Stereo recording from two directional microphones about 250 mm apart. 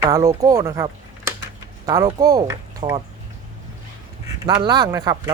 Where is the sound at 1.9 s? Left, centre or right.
Centre.